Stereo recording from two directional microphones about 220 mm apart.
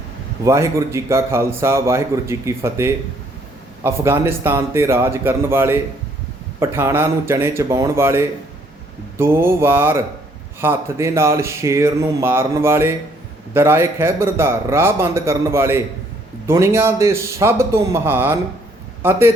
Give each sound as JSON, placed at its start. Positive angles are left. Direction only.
{"t": 0.4, "sound": "a man's voice", "side_deg": -15}